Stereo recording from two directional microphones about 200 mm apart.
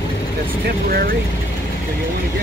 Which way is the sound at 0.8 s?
50° right (ahead or behind).